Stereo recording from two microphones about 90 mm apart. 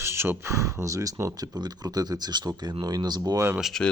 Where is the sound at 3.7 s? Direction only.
5° left (ahead or behind).